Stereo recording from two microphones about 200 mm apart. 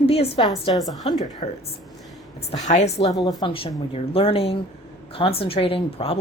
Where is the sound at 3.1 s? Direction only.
20° left (ahead or behind).